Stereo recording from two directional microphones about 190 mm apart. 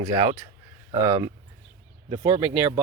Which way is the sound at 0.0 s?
20° right (ahead or behind).